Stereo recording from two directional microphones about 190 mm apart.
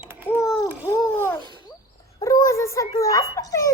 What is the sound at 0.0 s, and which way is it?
Babbling, 10° right (ahead or behind).